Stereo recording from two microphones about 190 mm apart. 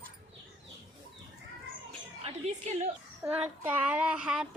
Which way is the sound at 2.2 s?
35° right (ahead or behind).